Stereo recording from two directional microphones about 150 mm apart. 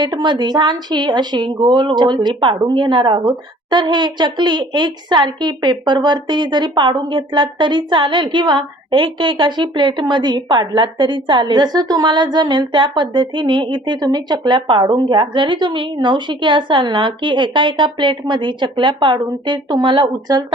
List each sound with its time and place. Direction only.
0.0 s a woman's voice: 30° right (ahead or behind)